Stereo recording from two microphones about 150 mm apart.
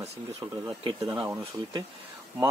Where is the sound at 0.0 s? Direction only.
45° right (ahead or behind).